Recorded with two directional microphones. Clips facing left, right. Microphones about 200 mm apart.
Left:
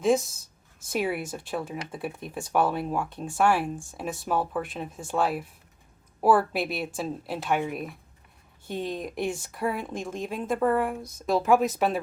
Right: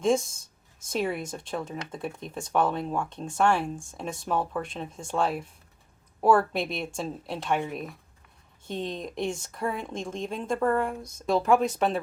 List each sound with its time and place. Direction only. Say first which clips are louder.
0.0 s speech: left 1 dB; 5° left (ahead or behind)